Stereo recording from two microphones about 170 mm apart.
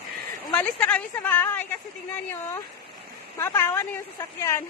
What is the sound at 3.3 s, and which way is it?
A woman's voice, 15° left (ahead or behind).